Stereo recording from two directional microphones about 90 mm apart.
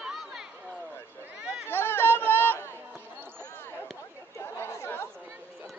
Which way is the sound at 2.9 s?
25° right (ahead or behind).